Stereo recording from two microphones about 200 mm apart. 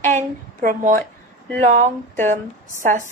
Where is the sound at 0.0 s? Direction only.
35° right (ahead or behind).